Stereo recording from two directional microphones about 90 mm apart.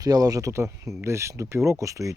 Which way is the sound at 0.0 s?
45° right (ahead or behind).